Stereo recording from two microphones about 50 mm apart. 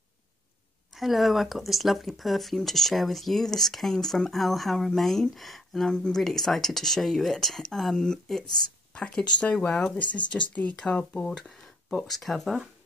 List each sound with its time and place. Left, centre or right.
0.9 s speech: centre
9.0 s speech: left
12.0 s speech: centre